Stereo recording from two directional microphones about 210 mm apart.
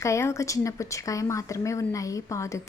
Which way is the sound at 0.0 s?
15° left (ahead or behind).